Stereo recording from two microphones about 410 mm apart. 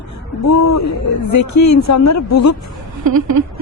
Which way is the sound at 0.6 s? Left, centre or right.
Left.